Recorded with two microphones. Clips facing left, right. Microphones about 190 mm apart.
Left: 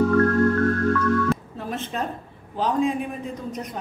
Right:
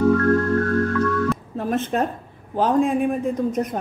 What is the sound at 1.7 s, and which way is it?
A woman's voice, 50° right (ahead or behind).